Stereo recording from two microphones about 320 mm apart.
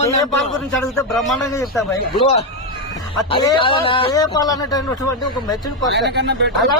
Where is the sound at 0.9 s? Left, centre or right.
Centre.